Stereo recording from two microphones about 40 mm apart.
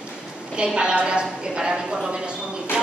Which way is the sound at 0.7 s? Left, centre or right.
Right.